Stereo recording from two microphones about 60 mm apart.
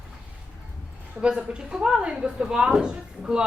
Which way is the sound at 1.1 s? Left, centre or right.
Centre.